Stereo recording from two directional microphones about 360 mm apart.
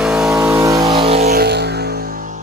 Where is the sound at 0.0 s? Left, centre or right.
Centre.